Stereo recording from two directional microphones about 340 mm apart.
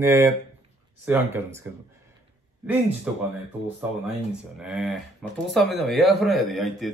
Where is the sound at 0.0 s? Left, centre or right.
Centre.